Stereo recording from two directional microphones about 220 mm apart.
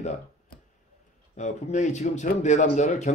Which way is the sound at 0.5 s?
45° left (ahead or behind).